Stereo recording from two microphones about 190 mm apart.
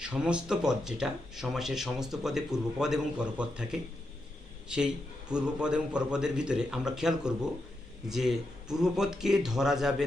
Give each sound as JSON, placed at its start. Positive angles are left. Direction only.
{"t": 0.0, "sound": "speech", "side_deg": -5}
{"t": 5.3, "sound": "speech", "side_deg": -5}